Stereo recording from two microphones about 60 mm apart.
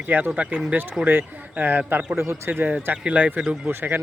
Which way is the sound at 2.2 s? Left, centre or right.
Right.